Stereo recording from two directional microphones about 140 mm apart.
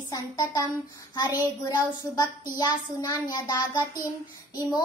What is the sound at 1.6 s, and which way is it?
Child singing, 30° left (ahead or behind).